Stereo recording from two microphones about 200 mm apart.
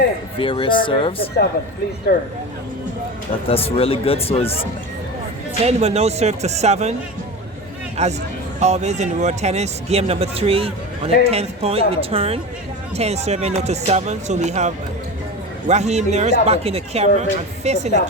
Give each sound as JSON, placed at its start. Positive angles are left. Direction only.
{"t": 0.3, "sound": "speech", "side_deg": 25}
{"t": 2.1, "sound": "speech", "side_deg": 50}
{"t": 3.5, "sound": "speech", "side_deg": 30}
{"t": 5.6, "sound": "speech", "side_deg": -30}
{"t": 8.0, "sound": "a woman's voice", "side_deg": -35}